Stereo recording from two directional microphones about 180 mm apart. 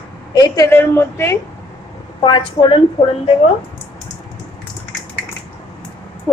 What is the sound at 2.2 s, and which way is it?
Speech, 25° left (ahead or behind).